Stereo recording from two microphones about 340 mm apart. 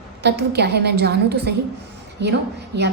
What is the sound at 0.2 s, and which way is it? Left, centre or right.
A woman's voice, right.